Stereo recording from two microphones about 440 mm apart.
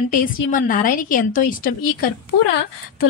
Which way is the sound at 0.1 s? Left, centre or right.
Centre.